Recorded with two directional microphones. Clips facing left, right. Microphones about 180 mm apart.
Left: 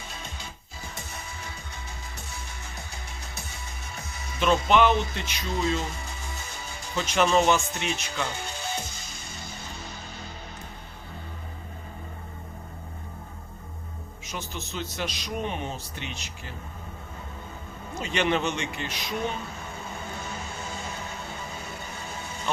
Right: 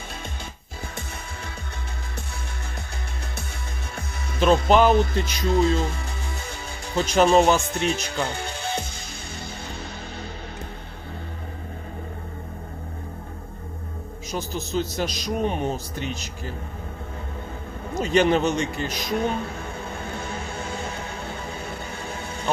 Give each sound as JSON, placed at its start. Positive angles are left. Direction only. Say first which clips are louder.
{"t": 4.4, "sound": "a man's voice", "louder": "right 4 dB", "side_deg": -35}
{"t": 6.9, "sound": "a man's voice", "louder": "right 5 dB", "side_deg": -35}
{"t": 14.3, "sound": "a man's voice", "louder": "right 7 dB", "side_deg": -35}
{"t": 17.9, "sound": "a man's voice", "louder": "right 7 dB", "side_deg": -40}